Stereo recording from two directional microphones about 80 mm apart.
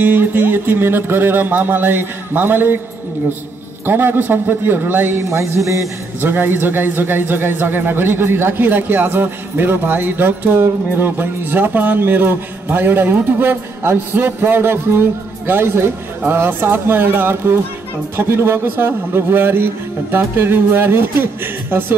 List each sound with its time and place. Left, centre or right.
0.0 s a man's voice: right
3.8 s a man's voice: right
6.3 s a man's voice: right